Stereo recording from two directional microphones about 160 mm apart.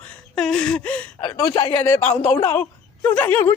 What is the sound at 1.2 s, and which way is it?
Speech, 25° left (ahead or behind).